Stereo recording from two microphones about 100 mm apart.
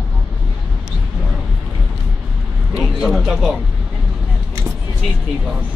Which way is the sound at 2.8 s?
Centre (ahead or behind).